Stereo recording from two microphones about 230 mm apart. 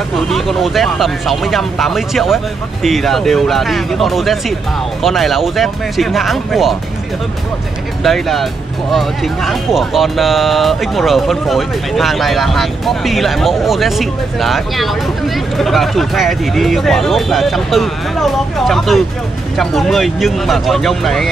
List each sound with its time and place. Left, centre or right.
0.1 s speech: centre
8.0 s speech: centre